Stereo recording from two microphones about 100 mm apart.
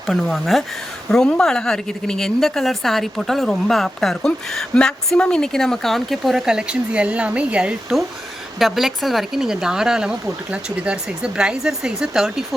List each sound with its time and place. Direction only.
0.1 s a woman's voice: centre (ahead or behind)